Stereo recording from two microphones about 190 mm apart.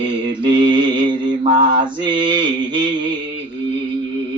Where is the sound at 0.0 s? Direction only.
25° right (ahead or behind).